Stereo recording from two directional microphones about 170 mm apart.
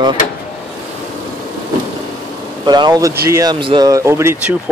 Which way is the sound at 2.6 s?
25° right (ahead or behind).